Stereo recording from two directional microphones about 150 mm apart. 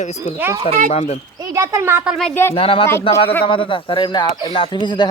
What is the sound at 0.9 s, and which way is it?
Speech, 45° left (ahead or behind).